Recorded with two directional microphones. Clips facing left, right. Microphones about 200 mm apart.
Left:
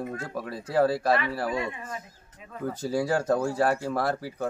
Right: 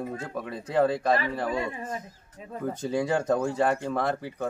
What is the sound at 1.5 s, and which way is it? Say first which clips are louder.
Speech: right 1 dB; 35° right (ahead or behind).